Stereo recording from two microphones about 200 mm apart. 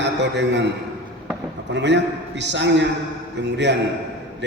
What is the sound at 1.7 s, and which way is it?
A man's voice, 60° right (ahead or behind).